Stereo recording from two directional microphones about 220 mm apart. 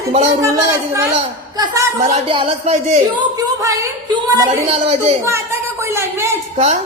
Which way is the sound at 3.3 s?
15° right (ahead or behind).